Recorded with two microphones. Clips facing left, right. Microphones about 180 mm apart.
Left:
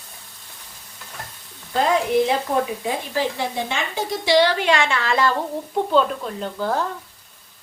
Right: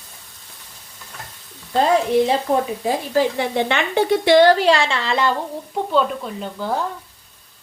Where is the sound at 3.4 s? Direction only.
65° right (ahead or behind); by 5.3 s 25° right (ahead or behind).